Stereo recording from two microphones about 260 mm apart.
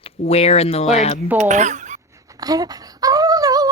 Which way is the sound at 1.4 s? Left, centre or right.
Right.